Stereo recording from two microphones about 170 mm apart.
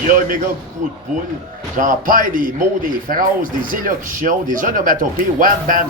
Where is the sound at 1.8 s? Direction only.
55° right (ahead or behind).